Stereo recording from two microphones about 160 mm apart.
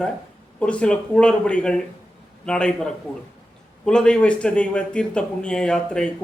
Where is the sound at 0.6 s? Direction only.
5° left (ahead or behind).